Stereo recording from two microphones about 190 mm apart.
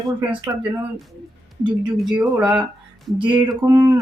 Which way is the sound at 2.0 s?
5° right (ahead or behind).